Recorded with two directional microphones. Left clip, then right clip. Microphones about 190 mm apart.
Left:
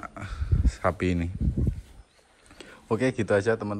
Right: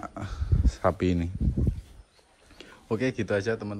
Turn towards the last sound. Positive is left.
turn(degrees=-10)  # may be behind; listen again after turning